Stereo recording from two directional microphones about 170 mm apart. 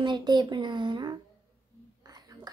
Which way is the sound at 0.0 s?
25° right (ahead or behind).